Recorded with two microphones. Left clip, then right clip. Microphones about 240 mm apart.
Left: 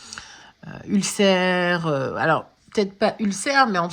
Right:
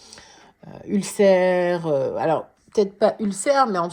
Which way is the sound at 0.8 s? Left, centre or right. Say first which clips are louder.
Right 2 dB; left.